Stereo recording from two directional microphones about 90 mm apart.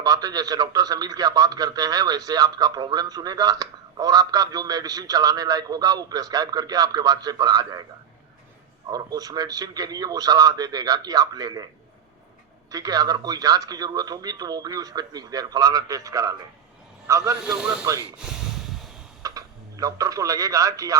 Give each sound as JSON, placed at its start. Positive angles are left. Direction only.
{"t": 0.0, "sound": "a man's voice", "side_deg": -45}
{"t": 8.9, "sound": "a man's voice", "side_deg": -45}
{"t": 12.7, "sound": "a man's voice", "side_deg": -45}
{"t": 17.6, "sound": "speech", "side_deg": -10}
{"t": 18.2, "sound": "a sound", "side_deg": -5}
{"t": 19.2, "sound": "speech", "side_deg": -40}